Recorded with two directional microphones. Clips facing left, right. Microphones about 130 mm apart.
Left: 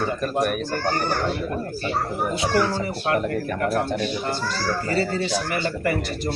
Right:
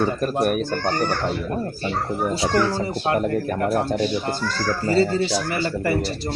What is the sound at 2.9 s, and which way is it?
A man's voice, 25° right (ahead or behind).